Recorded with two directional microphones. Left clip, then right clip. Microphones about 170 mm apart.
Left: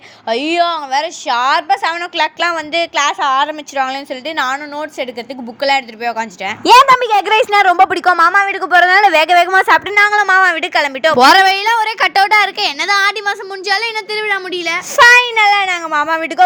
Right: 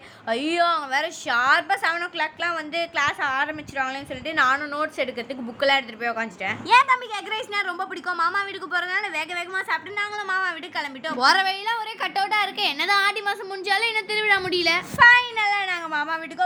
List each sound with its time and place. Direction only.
0.3 s a woman's voice: 25° left (ahead or behind)
6.7 s a woman's voice: 50° left (ahead or behind); by 14.8 s 20° left (ahead or behind)
14.9 s a woman's voice: 45° left (ahead or behind)